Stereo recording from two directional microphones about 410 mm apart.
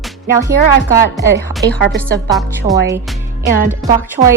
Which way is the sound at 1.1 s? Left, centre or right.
Centre.